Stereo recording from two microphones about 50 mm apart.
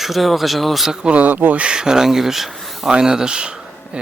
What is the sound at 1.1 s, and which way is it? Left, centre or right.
Speech, right.